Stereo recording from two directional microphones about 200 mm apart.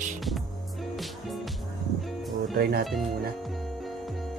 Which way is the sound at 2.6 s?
50° right (ahead or behind).